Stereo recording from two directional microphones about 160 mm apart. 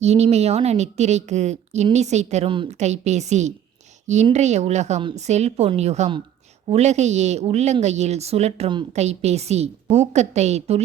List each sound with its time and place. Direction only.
0.0 s a woman's voice: 45° right (ahead or behind)
2.5 s a woman's voice: 30° right (ahead or behind)
2.7 s a woman's voice: 45° right (ahead or behind)